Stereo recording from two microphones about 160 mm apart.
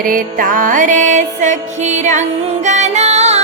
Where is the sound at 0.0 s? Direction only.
60° right (ahead or behind).